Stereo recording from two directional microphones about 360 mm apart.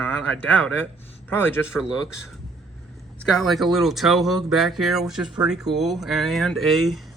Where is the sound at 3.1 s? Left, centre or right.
Centre.